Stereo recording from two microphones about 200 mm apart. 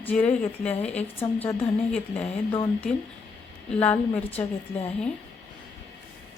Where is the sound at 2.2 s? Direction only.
25° left (ahead or behind).